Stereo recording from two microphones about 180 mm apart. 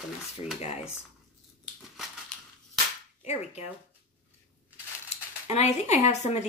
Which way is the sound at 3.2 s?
35° left (ahead or behind).